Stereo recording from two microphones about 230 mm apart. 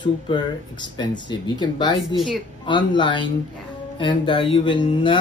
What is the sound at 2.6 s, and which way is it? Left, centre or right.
Speech, left.